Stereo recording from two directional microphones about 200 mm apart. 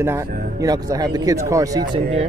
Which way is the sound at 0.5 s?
20° right (ahead or behind).